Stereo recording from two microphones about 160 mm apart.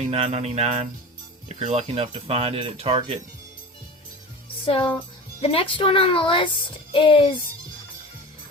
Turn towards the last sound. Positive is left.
turn(degrees=30)  # may be behind; listen again after turning